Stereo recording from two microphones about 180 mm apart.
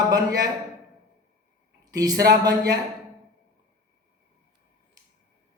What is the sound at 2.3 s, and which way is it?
Speech, 20° right (ahead or behind).